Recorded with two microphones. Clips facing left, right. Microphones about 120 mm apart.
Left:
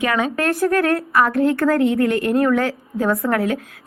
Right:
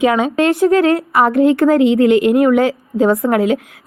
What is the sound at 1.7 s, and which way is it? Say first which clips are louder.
Speech: right 5 dB; 90° right.